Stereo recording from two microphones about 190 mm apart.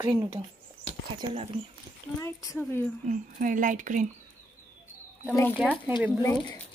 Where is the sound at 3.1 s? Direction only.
45° right (ahead or behind).